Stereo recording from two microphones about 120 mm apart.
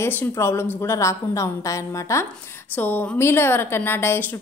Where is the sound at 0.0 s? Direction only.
20° left (ahead or behind).